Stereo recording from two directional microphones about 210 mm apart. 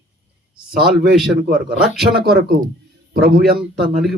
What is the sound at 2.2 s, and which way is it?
Speech, 50° right (ahead or behind).